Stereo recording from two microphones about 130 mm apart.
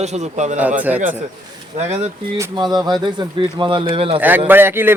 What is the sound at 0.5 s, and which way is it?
Speech, 10° right (ahead or behind).